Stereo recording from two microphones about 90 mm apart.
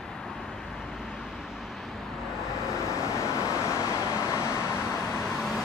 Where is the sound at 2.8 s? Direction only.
35° left (ahead or behind).